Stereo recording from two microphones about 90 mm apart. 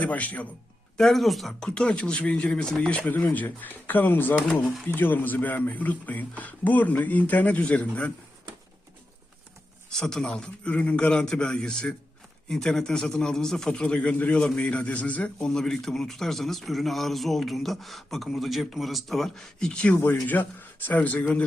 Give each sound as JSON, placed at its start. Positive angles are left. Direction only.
{"t": 0.0, "sound": "speech", "side_deg": 15}
{"t": 0.9, "sound": "speech", "side_deg": 5}
{"t": 4.6, "sound": "a man's voice", "side_deg": 5}
{"t": 4.9, "sound": "speech", "side_deg": 20}
{"t": 9.9, "sound": "a man's voice", "side_deg": 5}